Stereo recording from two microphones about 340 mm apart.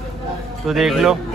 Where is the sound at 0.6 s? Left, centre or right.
Centre.